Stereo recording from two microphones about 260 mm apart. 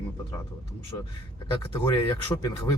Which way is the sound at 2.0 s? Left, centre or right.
Centre.